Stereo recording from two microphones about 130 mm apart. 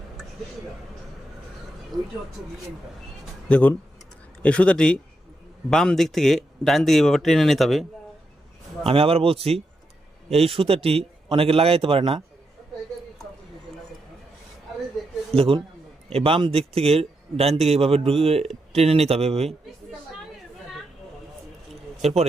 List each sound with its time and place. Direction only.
1.9 s speech: 35° right (ahead or behind)
3.5 s speech: 15° left (ahead or behind)
8.9 s speech: 45° right (ahead or behind)
15.4 s speech: 45° right (ahead or behind)
22.0 s speech: 55° right (ahead or behind)